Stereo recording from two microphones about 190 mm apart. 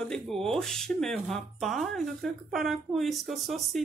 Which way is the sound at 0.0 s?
5° left (ahead or behind).